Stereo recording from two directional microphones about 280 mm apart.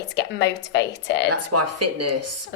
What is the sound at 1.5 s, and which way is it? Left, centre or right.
Speech, right.